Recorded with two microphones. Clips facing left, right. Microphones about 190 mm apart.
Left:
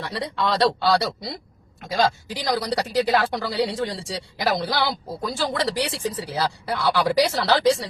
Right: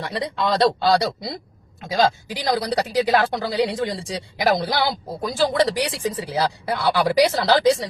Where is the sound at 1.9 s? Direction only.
20° right (ahead or behind).